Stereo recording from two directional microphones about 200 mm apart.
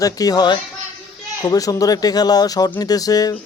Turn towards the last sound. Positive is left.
turn(degrees=20)  # may be behind; listen again after turning